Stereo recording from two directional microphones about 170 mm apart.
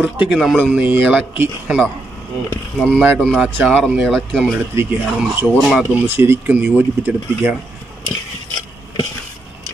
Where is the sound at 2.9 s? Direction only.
10° right (ahead or behind).